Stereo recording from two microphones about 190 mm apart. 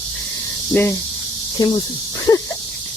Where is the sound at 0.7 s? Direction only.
15° left (ahead or behind).